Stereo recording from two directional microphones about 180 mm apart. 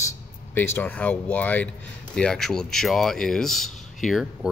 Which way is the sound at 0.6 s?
10° left (ahead or behind).